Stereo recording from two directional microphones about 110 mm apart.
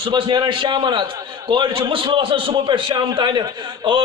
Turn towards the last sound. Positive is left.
turn(degrees=-45)  # may be behind; listen again after turning